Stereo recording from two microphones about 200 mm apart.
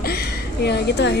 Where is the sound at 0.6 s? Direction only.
60° left (ahead or behind).